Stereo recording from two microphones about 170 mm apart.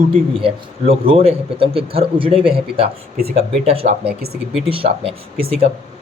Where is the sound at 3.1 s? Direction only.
65° right (ahead or behind).